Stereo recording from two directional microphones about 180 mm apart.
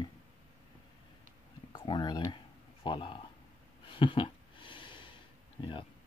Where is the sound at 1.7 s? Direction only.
25° left (ahead or behind).